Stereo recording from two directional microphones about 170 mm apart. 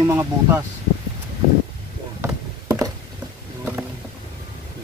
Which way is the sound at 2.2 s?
20° right (ahead or behind).